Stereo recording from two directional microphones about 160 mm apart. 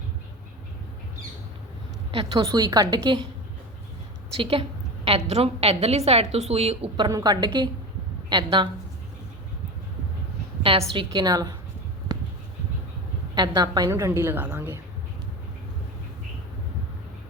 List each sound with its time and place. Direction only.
2.1 s a woman's voice: 35° right (ahead or behind)
2.5 s a woman's voice: 25° right (ahead or behind)
4.4 s a woman's voice: 35° right (ahead or behind)
10.6 s a woman's voice: 35° right (ahead or behind)
13.3 s a woman's voice: 25° right (ahead or behind)